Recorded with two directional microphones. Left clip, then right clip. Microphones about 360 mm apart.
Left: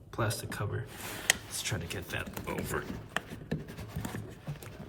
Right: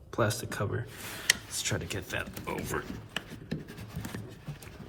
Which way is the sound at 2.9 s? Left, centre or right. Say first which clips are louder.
Left 2 dB; left.